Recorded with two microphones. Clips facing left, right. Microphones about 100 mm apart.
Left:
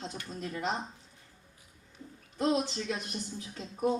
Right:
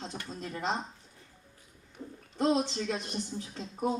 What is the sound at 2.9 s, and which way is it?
Speech, 30° right (ahead or behind).